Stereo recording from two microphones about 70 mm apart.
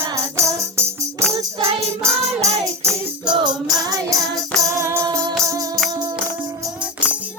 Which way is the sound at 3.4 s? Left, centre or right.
Right.